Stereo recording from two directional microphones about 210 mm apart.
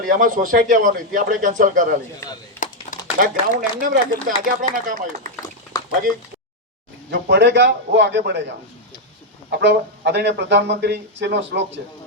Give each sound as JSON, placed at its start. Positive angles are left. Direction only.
{"t": 0.0, "sound": "a man's voice", "side_deg": -40}
{"t": 2.2, "sound": "speech", "side_deg": 10}
{"t": 3.2, "sound": "a man's voice", "side_deg": -40}
{"t": 7.1, "sound": "a man's voice", "side_deg": -55}